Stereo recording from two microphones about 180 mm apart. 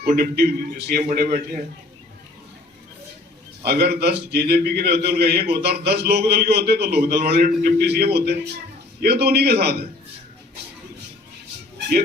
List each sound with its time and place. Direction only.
0.2 s a man's voice: 60° right (ahead or behind)
3.6 s a man's voice: 60° right (ahead or behind)